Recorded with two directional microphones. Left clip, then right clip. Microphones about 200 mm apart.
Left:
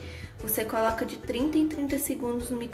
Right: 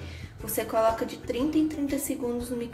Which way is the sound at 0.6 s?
10° left (ahead or behind).